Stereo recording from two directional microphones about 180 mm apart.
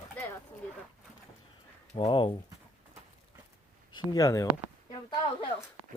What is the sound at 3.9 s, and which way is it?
Speech, 20° left (ahead or behind).